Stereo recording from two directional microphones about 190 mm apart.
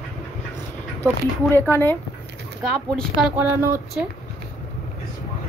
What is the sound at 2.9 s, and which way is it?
Speech, 5° right (ahead or behind).